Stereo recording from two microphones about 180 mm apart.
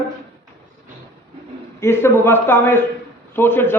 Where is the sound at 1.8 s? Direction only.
15° left (ahead or behind).